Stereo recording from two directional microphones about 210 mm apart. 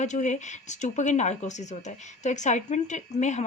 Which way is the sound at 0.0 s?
35° left (ahead or behind).